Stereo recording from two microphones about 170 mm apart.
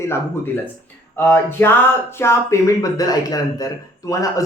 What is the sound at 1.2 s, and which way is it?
Speech, 15° left (ahead or behind).